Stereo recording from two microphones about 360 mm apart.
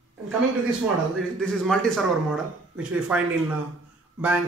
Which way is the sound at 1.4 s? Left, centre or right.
Centre.